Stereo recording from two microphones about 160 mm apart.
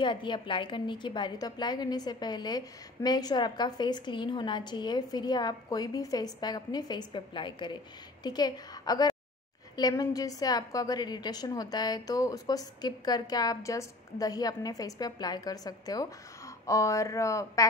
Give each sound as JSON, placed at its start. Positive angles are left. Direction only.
{"t": 0.0, "sound": "a woman's voice", "side_deg": 30}